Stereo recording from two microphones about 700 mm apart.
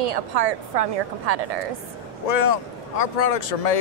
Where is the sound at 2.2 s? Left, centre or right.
Left.